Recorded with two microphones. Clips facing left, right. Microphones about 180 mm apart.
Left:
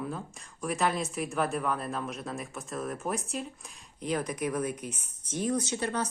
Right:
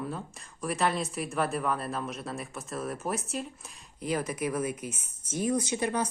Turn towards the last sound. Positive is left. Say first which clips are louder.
# right 2 dB
turn(degrees=-10)  # may be behind; listen again after turning